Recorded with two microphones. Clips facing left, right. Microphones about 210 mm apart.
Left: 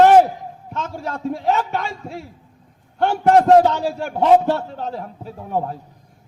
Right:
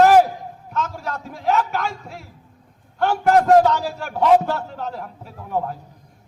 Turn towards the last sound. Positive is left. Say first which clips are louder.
# left 1 dB
turn(degrees=30)  # may be behind; listen again after turning